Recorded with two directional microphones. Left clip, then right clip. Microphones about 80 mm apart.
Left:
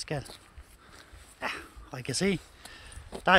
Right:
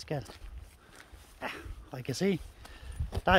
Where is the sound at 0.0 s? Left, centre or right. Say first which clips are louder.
Left 2 dB; right.